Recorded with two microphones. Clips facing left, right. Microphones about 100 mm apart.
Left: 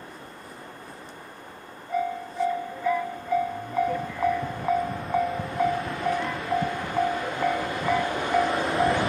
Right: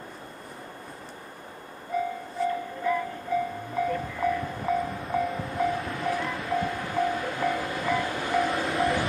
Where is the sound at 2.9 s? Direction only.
Centre (ahead or behind).